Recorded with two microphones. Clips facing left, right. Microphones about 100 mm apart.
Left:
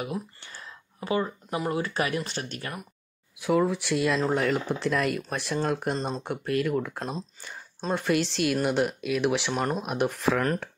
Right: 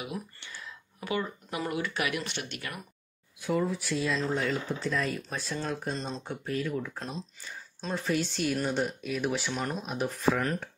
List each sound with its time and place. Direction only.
0.0 s a sound: 45° left (ahead or behind)
1.7 s speech: 35° left (ahead or behind)
3.3 s speech: 80° left
5.6 s speech: 55° left (ahead or behind)
7.0 s speech: 45° left (ahead or behind)
7.9 s a woman's voice: 70° left (ahead or behind); by 9.5 s 90° left
9.5 s speech: 50° left (ahead or behind); by 10.5 s 70° left (ahead or behind)